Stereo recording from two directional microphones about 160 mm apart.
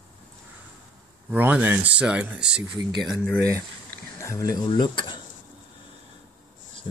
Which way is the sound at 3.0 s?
5° left (ahead or behind).